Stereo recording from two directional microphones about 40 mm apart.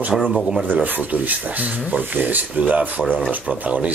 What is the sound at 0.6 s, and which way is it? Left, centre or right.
Speech, right.